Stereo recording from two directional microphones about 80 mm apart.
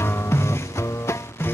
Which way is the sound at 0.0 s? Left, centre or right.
Left.